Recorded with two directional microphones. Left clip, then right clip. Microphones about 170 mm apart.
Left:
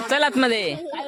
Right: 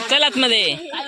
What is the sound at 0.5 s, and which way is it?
Speech, 60° left (ahead or behind).